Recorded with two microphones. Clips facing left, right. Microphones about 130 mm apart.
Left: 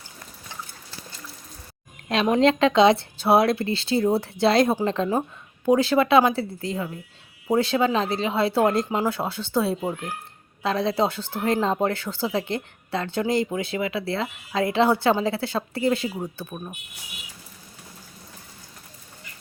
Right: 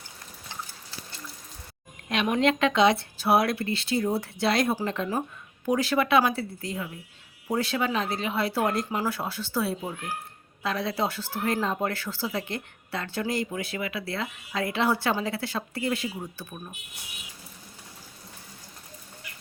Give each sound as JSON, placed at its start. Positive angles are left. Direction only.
{"t": 2.0, "sound": "speech", "side_deg": 30}